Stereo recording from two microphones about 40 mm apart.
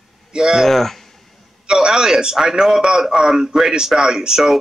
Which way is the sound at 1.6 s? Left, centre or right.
Centre.